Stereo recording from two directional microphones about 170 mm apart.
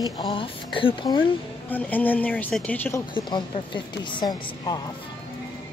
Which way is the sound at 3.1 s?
30° left (ahead or behind).